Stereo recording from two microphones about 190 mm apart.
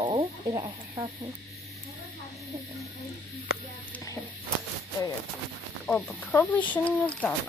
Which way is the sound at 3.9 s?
15° left (ahead or behind).